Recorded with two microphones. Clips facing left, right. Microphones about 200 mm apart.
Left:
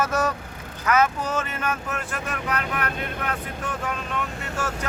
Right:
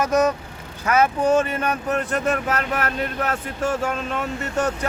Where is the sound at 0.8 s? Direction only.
30° right (ahead or behind).